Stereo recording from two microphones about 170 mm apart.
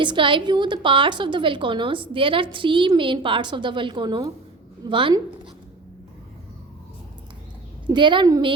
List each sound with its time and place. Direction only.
0.0 s a woman's voice: 30° right (ahead or behind)
7.9 s a woman's voice: 30° right (ahead or behind)